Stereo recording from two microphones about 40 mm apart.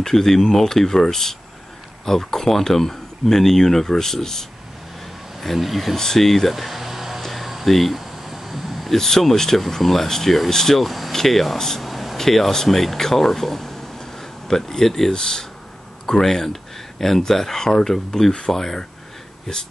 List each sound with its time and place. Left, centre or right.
0.0 s speech: centre
5.4 s speech: centre
5.9 s speech: centre
6.5 s a sound: centre
7.2 s air conditioning: centre
8.9 s speech: centre
11.8 s speech: centre